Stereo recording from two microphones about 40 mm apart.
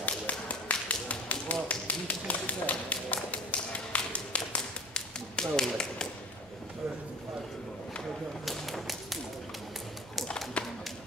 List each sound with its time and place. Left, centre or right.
0.0 s tap: left
5.4 s tap: centre
8.5 s tap: centre
10.6 s a sound: left